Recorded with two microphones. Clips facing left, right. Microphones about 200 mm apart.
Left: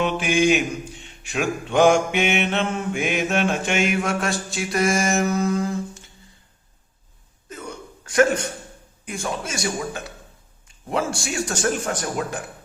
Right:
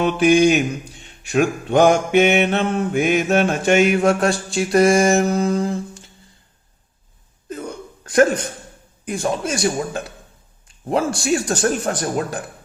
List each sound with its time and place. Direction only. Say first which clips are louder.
0.0 s mantra: right 6 dB; 40° right (ahead or behind)
8.0 s a sound: right 3 dB; 35° right (ahead or behind)
9.0 s mantra: right 7 dB; 35° right (ahead or behind)